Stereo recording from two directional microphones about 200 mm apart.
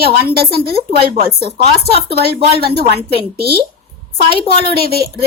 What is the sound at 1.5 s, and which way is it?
Speech, 30° right (ahead or behind).